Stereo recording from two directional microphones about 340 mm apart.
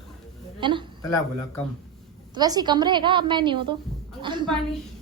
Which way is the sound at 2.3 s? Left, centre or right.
Centre.